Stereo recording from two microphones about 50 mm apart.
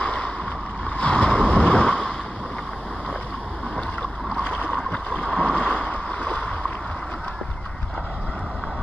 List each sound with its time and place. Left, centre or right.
0.0 s boat: left
4.4 s rowboat: left